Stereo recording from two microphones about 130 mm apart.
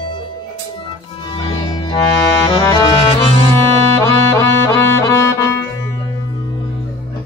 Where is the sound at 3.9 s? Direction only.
20° left (ahead or behind).